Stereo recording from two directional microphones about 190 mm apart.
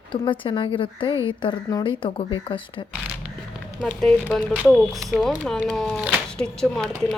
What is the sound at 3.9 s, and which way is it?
Speech, 5° left (ahead or behind).